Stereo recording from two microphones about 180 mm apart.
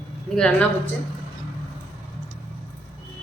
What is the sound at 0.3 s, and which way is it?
Speech, 5° left (ahead or behind).